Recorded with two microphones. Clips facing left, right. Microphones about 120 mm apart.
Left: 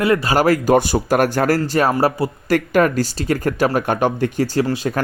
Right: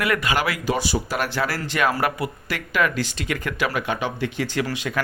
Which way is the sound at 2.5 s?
45° left (ahead or behind).